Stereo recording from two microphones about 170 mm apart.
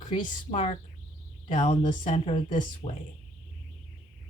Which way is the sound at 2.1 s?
30° left (ahead or behind).